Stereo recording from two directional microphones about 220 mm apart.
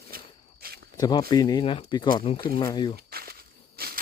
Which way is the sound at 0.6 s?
45° right (ahead or behind).